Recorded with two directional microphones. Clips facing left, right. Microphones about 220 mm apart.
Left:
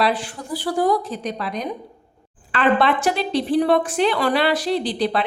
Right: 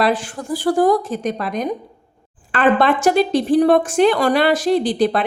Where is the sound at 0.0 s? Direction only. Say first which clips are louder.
Right 3 dB; 45° right (ahead or behind).